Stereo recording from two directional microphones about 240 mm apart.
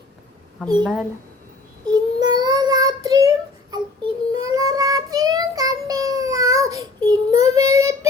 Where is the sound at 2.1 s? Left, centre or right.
Centre.